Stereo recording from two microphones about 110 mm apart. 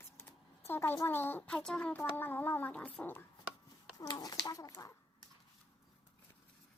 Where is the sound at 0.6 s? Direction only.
20° left (ahead or behind).